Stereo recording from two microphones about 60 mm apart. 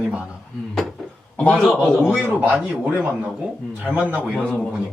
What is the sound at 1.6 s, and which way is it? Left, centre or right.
Speech, centre.